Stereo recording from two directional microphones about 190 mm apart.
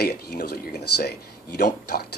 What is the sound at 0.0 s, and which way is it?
Speech, 55° left (ahead or behind).